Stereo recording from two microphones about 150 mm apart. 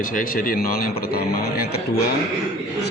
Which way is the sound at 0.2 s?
65° left (ahead or behind).